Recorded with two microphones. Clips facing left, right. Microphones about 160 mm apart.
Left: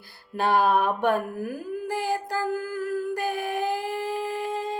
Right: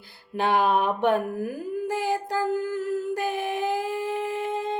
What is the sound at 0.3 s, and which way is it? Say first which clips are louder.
Mantra: even; 15° right (ahead or behind).